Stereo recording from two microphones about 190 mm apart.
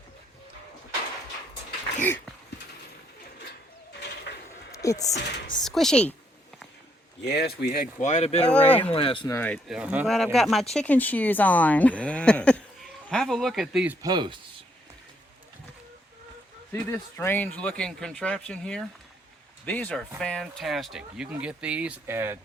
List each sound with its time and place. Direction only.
2.0 s speech: 10° left (ahead or behind)
4.7 s a sound: 15° left (ahead or behind)
5.1 s speech: 60° left (ahead or behind)
5.6 s speech: centre (ahead or behind)
7.3 s speech: 55° left (ahead or behind)
8.0 s speech: 35° left (ahead or behind)
8.4 s speech: 5° left (ahead or behind)
8.8 s speech: 30° left (ahead or behind)
9.2 s speech: 10° left (ahead or behind); by 14.0 s 5° right (ahead or behind)
14.0 s speech: 25° right (ahead or behind)
16.7 s speech: 10° left (ahead or behind); by 22.4 s 15° right (ahead or behind)